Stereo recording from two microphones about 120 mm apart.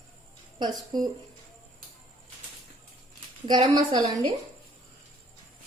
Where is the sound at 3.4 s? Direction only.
35° right (ahead or behind).